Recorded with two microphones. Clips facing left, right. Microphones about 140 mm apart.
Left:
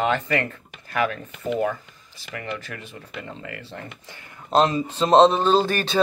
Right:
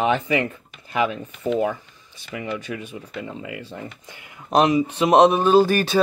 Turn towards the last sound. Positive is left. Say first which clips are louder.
# right 4 dB
turn(degrees=-10)  # may be behind; listen again after turning